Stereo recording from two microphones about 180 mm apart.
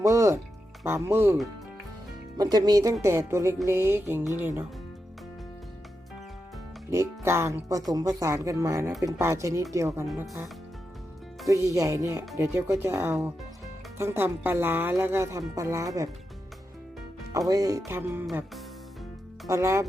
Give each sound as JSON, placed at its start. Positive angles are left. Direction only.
{"t": 0.0, "sound": "speech", "side_deg": -15}
{"t": 2.4, "sound": "speech", "side_deg": -20}
{"t": 6.9, "sound": "speech", "side_deg": -15}
{"t": 11.7, "sound": "speech", "side_deg": -15}
{"t": 17.3, "sound": "speech", "side_deg": -20}
{"t": 19.5, "sound": "speech", "side_deg": -15}